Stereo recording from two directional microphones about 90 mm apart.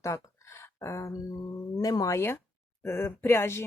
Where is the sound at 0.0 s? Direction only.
30° left (ahead or behind).